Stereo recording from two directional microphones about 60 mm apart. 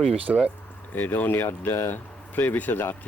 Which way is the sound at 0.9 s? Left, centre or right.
Left.